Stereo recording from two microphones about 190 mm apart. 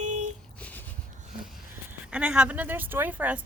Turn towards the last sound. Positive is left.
turn(degrees=-10)  # may be behind; listen again after turning